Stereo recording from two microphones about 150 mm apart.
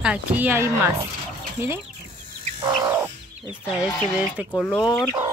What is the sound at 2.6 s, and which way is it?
Bird, 25° right (ahead or behind).